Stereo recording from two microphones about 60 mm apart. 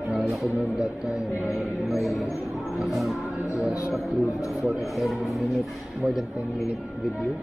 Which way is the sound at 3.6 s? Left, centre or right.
Centre.